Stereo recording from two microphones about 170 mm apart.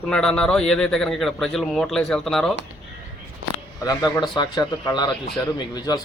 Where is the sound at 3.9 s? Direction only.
20° left (ahead or behind).